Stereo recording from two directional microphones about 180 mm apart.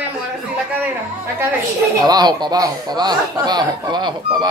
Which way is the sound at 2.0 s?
20° right (ahead or behind).